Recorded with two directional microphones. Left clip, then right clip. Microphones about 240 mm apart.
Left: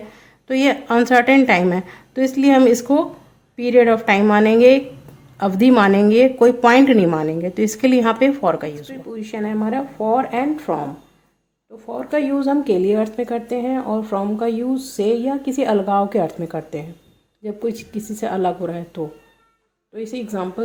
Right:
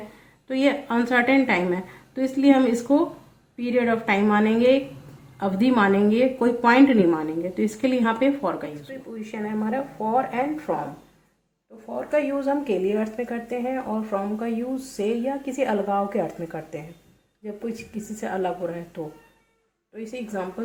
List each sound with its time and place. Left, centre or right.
0.4 s a woman's voice: left
11.9 s a woman's voice: left
18.2 s a woman's voice: left
20.3 s a woman's voice: left